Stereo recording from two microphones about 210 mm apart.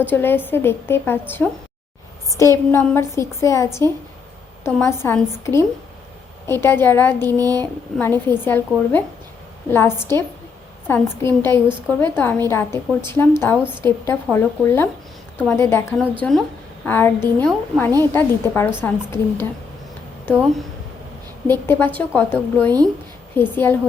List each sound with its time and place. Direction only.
0.0 s a woman's voice: 10° left (ahead or behind)
7.3 s a sound: 15° right (ahead or behind)
7.9 s a woman's voice: 10° left (ahead or behind)